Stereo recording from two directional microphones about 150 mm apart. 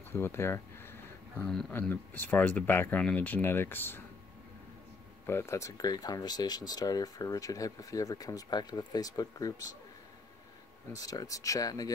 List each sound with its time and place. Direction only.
0.1 s speech: 15° left (ahead or behind)
1.3 s speech: 5° left (ahead or behind)
5.2 s speech: 15° left (ahead or behind)
10.9 s speech: 25° left (ahead or behind)